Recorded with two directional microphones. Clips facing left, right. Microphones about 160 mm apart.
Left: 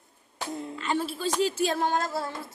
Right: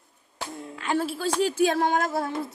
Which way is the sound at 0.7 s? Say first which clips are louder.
Right 4 dB; 10° right (ahead or behind).